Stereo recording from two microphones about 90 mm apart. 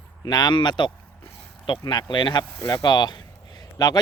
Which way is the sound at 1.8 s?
55° left (ahead or behind).